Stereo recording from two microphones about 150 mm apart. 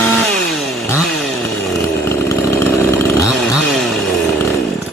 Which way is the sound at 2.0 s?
15° left (ahead or behind).